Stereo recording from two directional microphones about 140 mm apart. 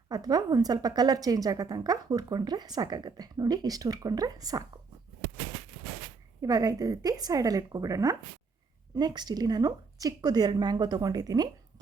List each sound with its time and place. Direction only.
0.1 s a woman's voice: 25° right (ahead or behind)
6.4 s a woman's voice: 25° right (ahead or behind)